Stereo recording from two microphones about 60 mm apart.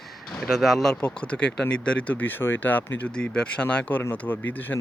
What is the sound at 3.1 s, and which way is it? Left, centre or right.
Speech, centre.